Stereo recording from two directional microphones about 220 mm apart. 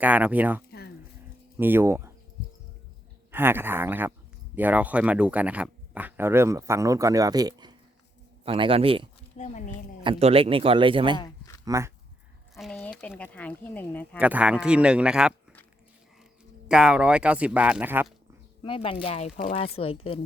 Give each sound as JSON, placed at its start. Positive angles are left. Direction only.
{"t": 0.0, "sound": "speech", "side_deg": -5}
{"t": 0.7, "sound": "a sound", "side_deg": 45}
{"t": 1.5, "sound": "speech", "side_deg": -10}
{"t": 3.3, "sound": "speech", "side_deg": -10}
{"t": 9.4, "sound": "speech", "side_deg": 35}
{"t": 10.0, "sound": "speech", "side_deg": -25}
{"t": 12.5, "sound": "speech", "side_deg": 0}
{"t": 14.2, "sound": "speech", "side_deg": -5}
{"t": 16.6, "sound": "speech", "side_deg": -5}
{"t": 18.6, "sound": "speech", "side_deg": 25}